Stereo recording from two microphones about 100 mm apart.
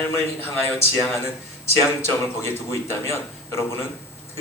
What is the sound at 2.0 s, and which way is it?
A man's voice, 25° left (ahead or behind).